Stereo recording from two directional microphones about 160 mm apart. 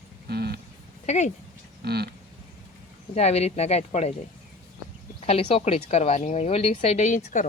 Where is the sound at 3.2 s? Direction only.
40° left (ahead or behind).